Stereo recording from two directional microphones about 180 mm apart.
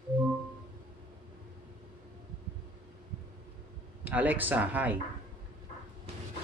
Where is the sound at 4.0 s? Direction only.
10° right (ahead or behind).